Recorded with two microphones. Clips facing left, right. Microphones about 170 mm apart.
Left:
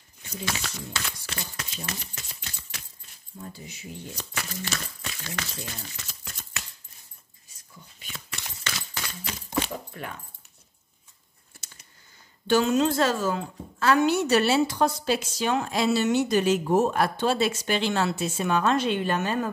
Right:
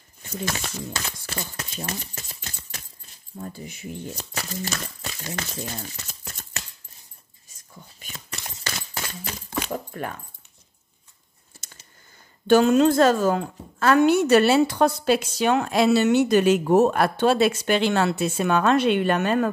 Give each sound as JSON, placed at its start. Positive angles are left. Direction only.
{"t": 0.3, "sound": "speech", "side_deg": -50}
{"t": 4.4, "sound": "speech", "side_deg": -35}
{"t": 8.0, "sound": "a sound", "side_deg": -40}
{"t": 9.7, "sound": "dog", "side_deg": -45}
{"t": 12.4, "sound": "a woman's voice", "side_deg": -55}